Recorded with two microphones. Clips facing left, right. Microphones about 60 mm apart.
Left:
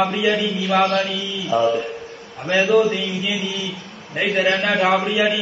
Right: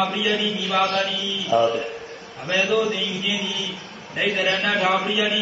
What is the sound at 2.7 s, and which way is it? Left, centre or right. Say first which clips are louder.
Speech: left 7 dB; left.